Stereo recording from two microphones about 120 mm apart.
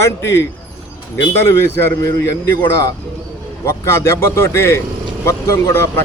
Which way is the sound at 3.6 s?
20° left (ahead or behind).